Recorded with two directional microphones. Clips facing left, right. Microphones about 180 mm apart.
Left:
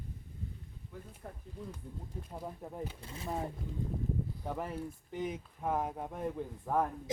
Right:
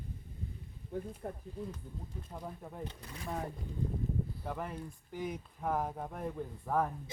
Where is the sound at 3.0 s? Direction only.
25° left (ahead or behind).